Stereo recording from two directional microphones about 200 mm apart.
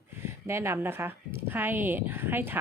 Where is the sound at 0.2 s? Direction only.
15° right (ahead or behind).